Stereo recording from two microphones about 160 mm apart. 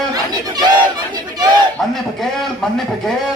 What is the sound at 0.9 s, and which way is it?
Crowd, 25° right (ahead or behind).